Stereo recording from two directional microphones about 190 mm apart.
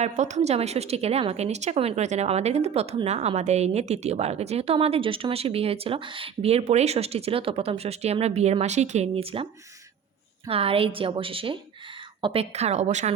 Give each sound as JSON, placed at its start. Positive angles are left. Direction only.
{"t": 0.0, "sound": "a woman's voice", "side_deg": -40}